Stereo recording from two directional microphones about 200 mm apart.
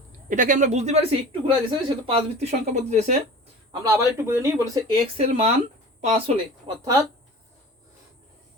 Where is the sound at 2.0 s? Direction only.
30° right (ahead or behind).